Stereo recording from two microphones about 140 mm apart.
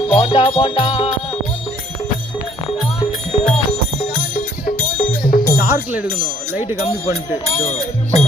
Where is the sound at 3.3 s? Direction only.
45° left (ahead or behind).